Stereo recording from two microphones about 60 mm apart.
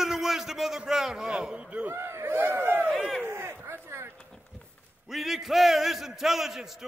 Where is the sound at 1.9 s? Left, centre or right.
Right.